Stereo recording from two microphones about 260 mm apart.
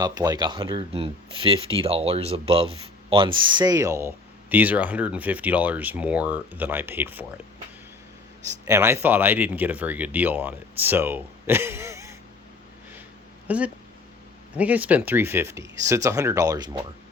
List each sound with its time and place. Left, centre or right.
0.0 s speech: centre
8.6 s speech: centre
13.5 s speech: centre